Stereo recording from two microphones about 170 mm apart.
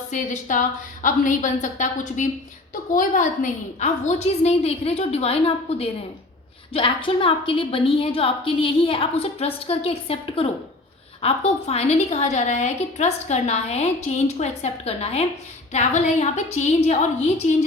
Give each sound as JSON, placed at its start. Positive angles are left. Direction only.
{"t": 0.1, "sound": "a woman's voice", "side_deg": 50}